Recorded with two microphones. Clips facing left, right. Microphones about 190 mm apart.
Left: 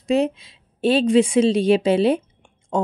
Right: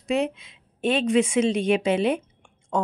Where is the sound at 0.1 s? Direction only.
35° left (ahead or behind).